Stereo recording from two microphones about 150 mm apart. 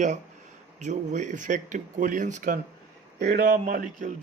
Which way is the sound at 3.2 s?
90° right.